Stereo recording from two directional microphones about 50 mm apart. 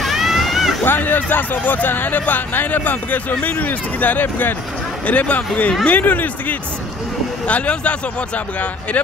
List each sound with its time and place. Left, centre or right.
0.0 s a sound: centre
0.8 s speech: left
5.0 s speech: left
7.4 s speech: left